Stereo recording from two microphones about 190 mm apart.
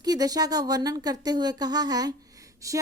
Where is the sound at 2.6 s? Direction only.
15° right (ahead or behind).